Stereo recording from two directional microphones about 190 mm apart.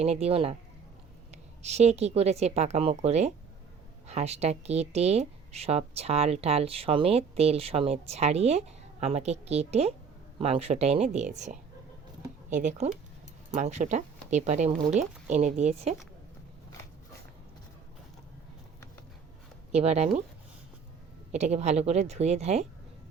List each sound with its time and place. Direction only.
0.0 s speech: 35° right (ahead or behind)
1.6 s speech: 35° right (ahead or behind)
19.7 s speech: 35° right (ahead or behind)
21.3 s speech: 35° right (ahead or behind)